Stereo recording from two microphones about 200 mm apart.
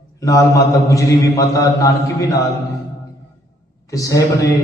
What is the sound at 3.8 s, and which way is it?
Speech, 15° left (ahead or behind).